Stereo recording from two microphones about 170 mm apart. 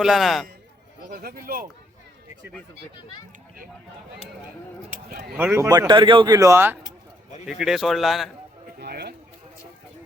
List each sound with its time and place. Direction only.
0.0 s a man's voice: centre (ahead or behind)
1.1 s speech: 60° right (ahead or behind)
5.4 s speech: 15° right (ahead or behind)
7.4 s a man's voice: centre (ahead or behind)
8.8 s a sound: 70° right (ahead or behind)